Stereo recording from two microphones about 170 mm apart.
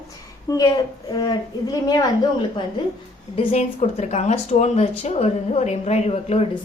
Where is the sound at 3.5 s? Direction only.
40° left (ahead or behind).